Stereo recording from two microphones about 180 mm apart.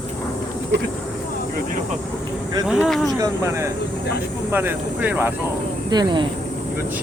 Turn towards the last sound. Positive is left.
turn(degrees=-25)  # may be behind; listen again after turning